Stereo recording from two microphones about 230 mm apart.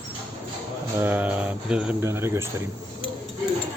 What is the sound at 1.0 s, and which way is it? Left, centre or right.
Speech, centre.